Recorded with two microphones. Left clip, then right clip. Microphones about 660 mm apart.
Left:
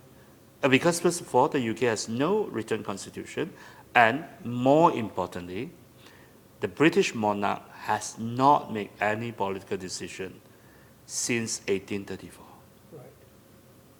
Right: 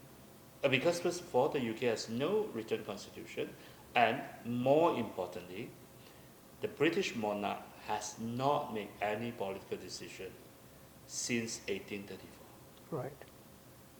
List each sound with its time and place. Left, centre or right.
0.6 s speech: left